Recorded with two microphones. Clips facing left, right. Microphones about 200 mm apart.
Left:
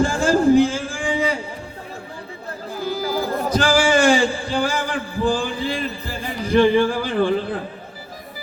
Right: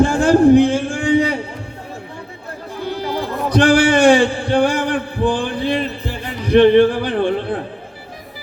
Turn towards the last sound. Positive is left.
turn(degrees=-65)  # may be behind; listen again after turning